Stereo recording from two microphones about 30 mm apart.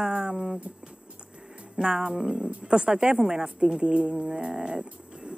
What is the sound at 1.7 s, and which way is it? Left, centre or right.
Speech, right.